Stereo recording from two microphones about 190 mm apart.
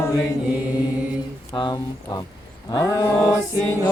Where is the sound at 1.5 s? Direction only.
25° left (ahead or behind).